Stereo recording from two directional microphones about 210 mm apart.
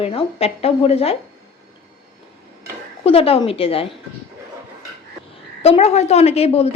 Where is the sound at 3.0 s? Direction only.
25° left (ahead or behind).